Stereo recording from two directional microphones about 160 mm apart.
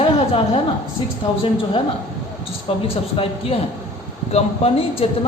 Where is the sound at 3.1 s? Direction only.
35° left (ahead or behind).